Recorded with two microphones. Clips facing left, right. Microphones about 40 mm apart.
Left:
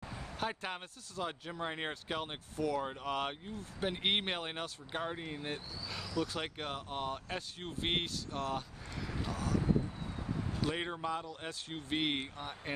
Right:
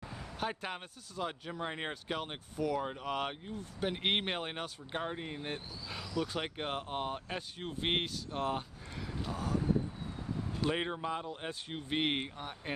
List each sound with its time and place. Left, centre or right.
0.4 s speech: centre
7.2 s speech: centre
8.3 s speech: right
10.6 s speech: centre